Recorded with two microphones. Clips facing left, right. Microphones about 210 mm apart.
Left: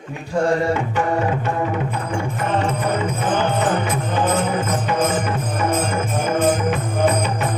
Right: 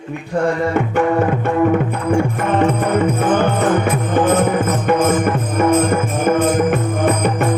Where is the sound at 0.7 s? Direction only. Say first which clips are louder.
Right 4 dB; 55° right (ahead or behind).